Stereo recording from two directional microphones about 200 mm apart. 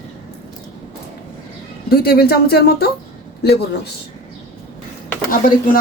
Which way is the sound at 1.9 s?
50° left (ahead or behind).